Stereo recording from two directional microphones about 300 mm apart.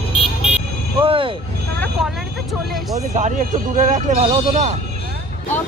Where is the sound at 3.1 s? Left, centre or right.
Right.